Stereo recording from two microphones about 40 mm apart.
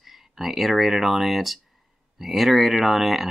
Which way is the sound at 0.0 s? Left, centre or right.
Centre.